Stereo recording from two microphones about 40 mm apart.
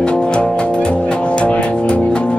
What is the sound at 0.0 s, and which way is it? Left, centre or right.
Music, left.